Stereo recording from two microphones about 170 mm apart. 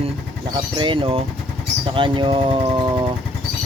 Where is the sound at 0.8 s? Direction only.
30° right (ahead or behind).